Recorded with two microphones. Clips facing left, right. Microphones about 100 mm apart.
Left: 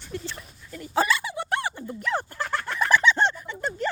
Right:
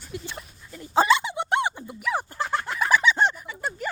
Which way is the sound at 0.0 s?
10° right (ahead or behind).